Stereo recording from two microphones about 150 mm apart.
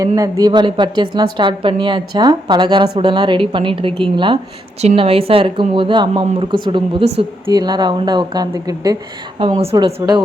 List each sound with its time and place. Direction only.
0.2 s a woman's voice: 25° right (ahead or behind)
4.8 s a woman's voice: 45° right (ahead or behind); by 10.2 s 25° right (ahead or behind)